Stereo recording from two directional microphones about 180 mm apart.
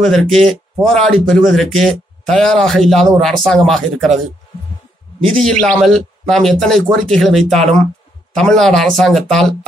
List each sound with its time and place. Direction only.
0.0 s speech: centre (ahead or behind)
5.2 s speech: 5° left (ahead or behind)